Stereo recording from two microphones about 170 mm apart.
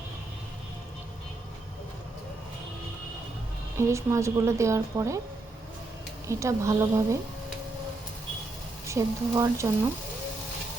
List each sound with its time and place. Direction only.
3.8 s a woman's voice: 15° right (ahead or behind)
6.2 s a woman's voice: 15° right (ahead or behind)
8.9 s a woman's voice: 15° right (ahead or behind)